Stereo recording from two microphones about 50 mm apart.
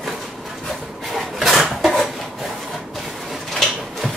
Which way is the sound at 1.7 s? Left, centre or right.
Centre.